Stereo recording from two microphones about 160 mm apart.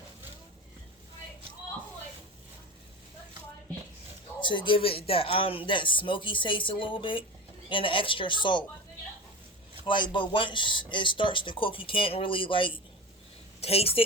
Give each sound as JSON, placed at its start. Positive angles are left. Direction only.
{"t": 4.4, "sound": "speech", "side_deg": 30}
{"t": 9.8, "sound": "speech", "side_deg": 30}